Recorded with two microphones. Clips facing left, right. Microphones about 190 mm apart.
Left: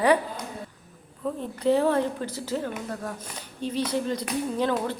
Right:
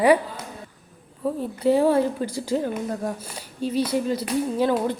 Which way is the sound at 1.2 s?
10° right (ahead or behind).